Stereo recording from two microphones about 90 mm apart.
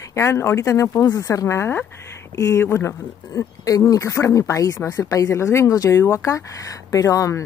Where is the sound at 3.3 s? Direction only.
40° left (ahead or behind).